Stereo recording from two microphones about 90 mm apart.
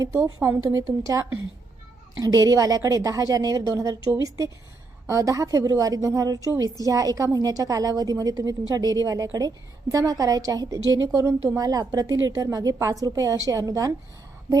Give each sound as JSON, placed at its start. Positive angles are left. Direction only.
{"t": 0.0, "sound": "a woman's voice", "side_deg": -35}
{"t": 5.0, "sound": "a woman's voice", "side_deg": -35}